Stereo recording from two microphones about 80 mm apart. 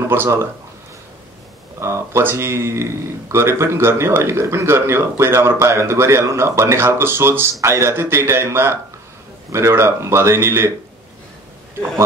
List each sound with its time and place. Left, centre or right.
0.1 s speech: right
1.8 s speech: right